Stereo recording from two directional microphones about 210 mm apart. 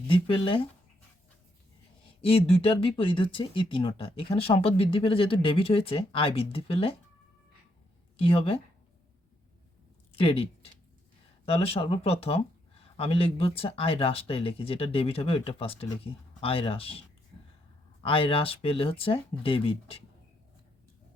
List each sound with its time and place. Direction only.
0.1 s speech: 25° left (ahead or behind)
2.2 s speech: 25° left (ahead or behind)
8.1 s speech: 25° left (ahead or behind)
10.2 s speech: 25° left (ahead or behind)
18.0 s speech: 25° left (ahead or behind)